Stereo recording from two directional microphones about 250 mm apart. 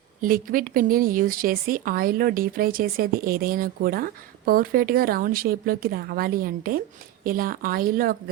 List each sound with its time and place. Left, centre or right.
0.2 s speech: right